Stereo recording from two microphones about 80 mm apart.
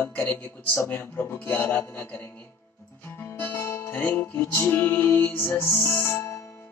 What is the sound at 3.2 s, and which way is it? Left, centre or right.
Music, left.